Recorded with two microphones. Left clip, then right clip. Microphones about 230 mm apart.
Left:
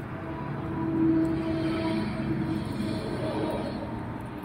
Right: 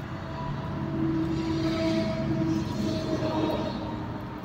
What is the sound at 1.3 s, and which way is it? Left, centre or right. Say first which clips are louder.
Vehicle: even; right.